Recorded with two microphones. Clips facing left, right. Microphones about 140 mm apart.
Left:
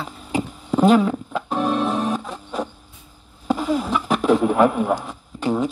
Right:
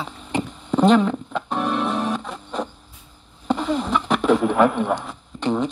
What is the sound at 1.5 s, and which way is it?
Music, 45° left (ahead or behind).